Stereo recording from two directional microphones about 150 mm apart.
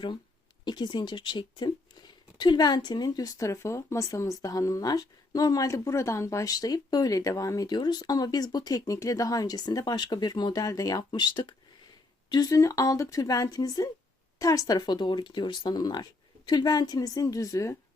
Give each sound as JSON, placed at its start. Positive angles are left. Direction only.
{"t": 0.6, "sound": "speech", "side_deg": 30}